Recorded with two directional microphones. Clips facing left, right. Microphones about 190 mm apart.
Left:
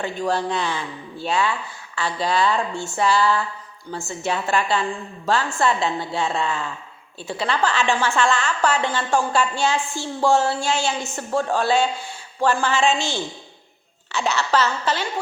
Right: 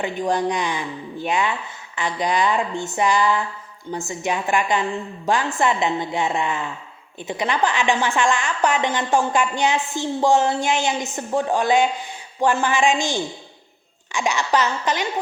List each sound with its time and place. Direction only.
0.0 s a woman's voice: 15° right (ahead or behind)